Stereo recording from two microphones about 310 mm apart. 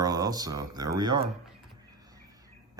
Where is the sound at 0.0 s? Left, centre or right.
Centre.